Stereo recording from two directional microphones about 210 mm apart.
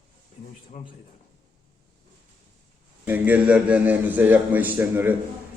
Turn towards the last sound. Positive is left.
turn(degrees=-10)  # may be behind; listen again after turning